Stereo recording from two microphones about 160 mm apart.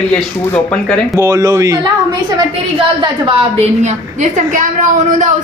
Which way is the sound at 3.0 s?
35° right (ahead or behind).